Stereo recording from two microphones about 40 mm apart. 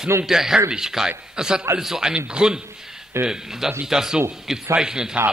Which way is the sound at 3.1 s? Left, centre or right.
Right.